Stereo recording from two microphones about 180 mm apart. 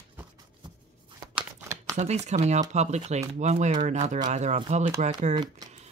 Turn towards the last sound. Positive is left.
turn(degrees=-40)  # may be behind; listen again after turning